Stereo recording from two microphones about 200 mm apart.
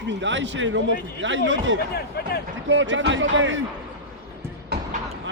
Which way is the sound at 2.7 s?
70° right (ahead or behind).